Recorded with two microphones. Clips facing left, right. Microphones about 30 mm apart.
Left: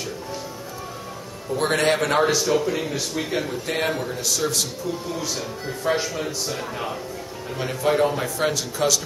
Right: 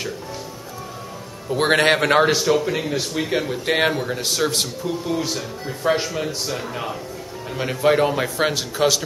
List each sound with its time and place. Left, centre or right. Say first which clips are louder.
1.5 s a man's voice: right 4 dB; right
2.8 s speech: right 3 dB; centre
3.6 s a man's voice: right 5 dB; right
5.9 s speech: right 3 dB; centre
7.8 s speech: right 3 dB; right